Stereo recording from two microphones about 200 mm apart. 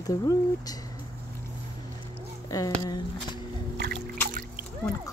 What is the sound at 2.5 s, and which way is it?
Speech, 20° left (ahead or behind).